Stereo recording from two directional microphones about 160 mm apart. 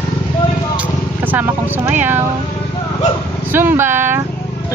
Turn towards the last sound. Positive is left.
turn(degrees=-15)  # may be behind; listen again after turning